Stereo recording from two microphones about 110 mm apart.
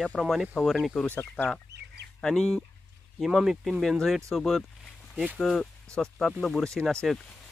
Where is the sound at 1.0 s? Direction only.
15° left (ahead or behind).